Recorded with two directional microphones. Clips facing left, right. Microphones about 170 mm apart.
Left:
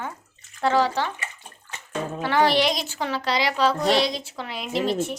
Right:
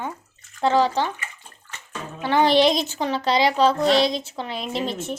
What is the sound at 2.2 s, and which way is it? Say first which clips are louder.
A child's voice: right 4 dB; 20° right (ahead or behind).